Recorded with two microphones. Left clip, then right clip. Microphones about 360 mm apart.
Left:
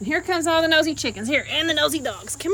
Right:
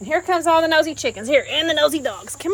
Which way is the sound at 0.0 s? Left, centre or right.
Centre.